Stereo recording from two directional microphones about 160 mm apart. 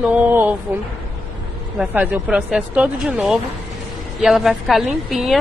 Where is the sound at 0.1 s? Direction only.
10° right (ahead or behind).